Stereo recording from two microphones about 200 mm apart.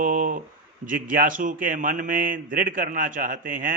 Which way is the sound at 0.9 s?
45° right (ahead or behind).